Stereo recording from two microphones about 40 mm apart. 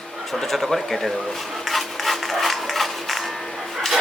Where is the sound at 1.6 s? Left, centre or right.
Centre.